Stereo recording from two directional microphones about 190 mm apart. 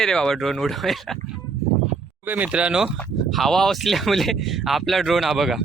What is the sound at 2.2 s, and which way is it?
Speech, 10° right (ahead or behind).